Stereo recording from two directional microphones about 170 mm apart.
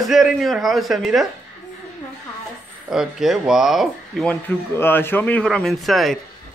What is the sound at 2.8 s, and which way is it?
A man's voice, centre (ahead or behind).